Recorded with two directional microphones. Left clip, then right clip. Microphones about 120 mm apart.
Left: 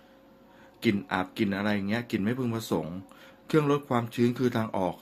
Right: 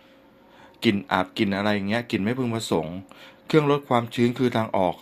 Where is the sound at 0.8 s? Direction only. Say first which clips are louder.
Right 6 dB; 20° right (ahead or behind).